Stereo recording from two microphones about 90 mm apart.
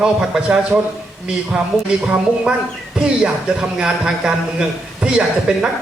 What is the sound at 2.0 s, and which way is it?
A woman's voice, 10° right (ahead or behind).